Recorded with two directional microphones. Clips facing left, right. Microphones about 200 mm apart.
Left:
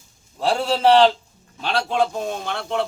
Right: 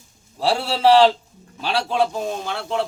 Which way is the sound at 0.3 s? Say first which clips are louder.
Left 1 dB; 5° right (ahead or behind).